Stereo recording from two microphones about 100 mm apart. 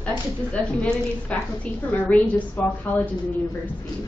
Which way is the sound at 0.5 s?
10° left (ahead or behind).